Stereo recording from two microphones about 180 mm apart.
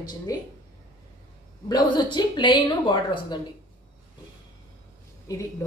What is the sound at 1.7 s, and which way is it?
A woman's voice, 25° left (ahead or behind).